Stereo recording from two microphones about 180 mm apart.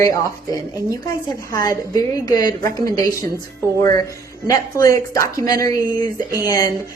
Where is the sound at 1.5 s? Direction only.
20° left (ahead or behind).